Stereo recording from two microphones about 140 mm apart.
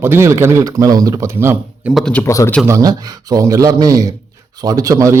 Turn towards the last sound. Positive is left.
turn(degrees=-25)  # may be behind; listen again after turning